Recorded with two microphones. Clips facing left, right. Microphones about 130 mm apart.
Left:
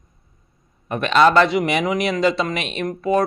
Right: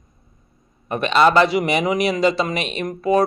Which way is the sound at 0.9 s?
Centre (ahead or behind).